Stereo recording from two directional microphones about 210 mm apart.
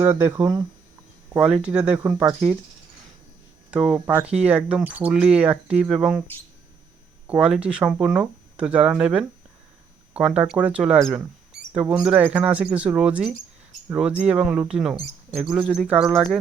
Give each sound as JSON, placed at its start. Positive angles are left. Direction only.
{"t": 0.0, "sound": "speech", "side_deg": -10}
{"t": 1.6, "sound": "speech", "side_deg": -5}
{"t": 3.7, "sound": "speech", "side_deg": -5}
{"t": 7.3, "sound": "speech", "side_deg": -5}